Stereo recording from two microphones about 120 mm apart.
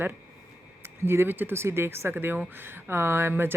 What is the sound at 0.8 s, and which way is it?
Speech, 20° right (ahead or behind).